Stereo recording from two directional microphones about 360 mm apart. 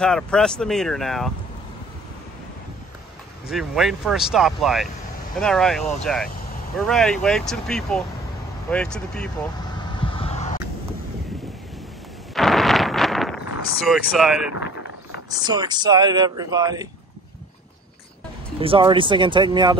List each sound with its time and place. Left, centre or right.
0.0 s speech: centre
3.4 s speech: centre
10.1 s a sound: centre
12.4 s a sound: centre
13.8 s speech: centre
15.2 s speech: centre
18.6 s speech: centre